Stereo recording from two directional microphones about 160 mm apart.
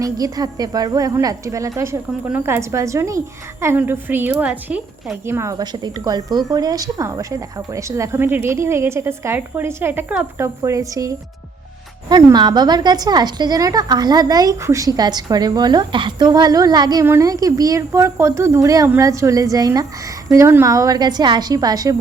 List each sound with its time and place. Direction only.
0.0 s a woman's voice: 25° right (ahead or behind)